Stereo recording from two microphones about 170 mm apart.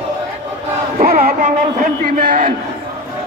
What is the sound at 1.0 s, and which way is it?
Speech, 60° right (ahead or behind).